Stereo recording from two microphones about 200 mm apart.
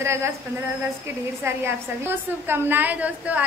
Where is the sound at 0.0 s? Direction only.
15° right (ahead or behind).